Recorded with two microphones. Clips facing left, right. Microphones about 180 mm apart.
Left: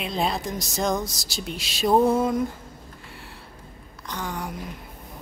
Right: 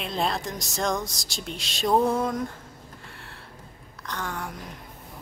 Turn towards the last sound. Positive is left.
turn(degrees=0)  # may be behind; listen again after turning